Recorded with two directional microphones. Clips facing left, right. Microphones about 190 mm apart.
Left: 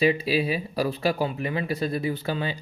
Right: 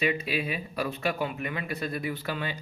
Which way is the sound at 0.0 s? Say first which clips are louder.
Left 6 dB; 30° left (ahead or behind).